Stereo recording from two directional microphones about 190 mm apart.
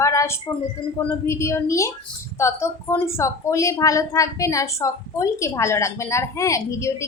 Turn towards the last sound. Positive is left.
turn(degrees=15)  # may be behind; listen again after turning